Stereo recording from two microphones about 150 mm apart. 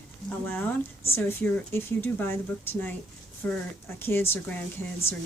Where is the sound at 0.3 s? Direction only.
10° left (ahead or behind).